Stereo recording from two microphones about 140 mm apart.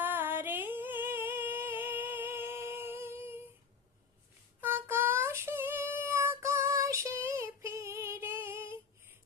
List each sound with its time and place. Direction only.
0.0 s singing: 15° right (ahead or behind)
4.6 s child singing: 15° right (ahead or behind)